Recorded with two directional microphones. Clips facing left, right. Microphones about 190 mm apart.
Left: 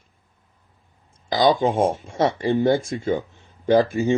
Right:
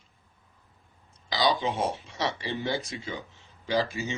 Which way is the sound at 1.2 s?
50° left (ahead or behind).